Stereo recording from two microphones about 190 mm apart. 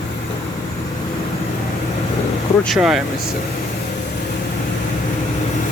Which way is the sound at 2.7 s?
Centre (ahead or behind).